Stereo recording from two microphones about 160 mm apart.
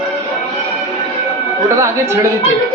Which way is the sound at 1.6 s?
15° right (ahead or behind).